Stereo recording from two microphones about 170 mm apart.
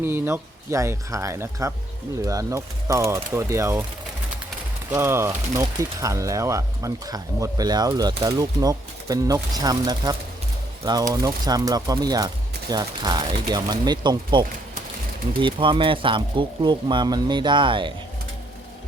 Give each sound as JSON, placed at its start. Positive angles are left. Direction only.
{"t": 0.0, "sound": "speech", "side_deg": -15}
{"t": 4.9, "sound": "speech", "side_deg": -15}